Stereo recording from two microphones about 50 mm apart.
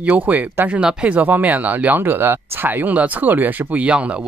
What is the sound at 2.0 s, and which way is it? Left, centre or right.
Speech, right.